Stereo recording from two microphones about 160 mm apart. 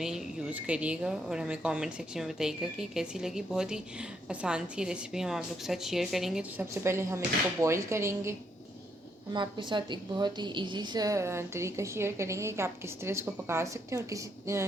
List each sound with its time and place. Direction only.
0.0 s a woman's voice: 5° right (ahead or behind)
6.8 s a woman's voice: 15° right (ahead or behind)
9.3 s a woman's voice: 30° right (ahead or behind)